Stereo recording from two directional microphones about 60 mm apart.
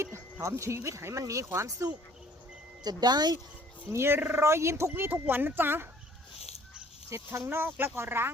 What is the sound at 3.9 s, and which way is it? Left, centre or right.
Speech, right.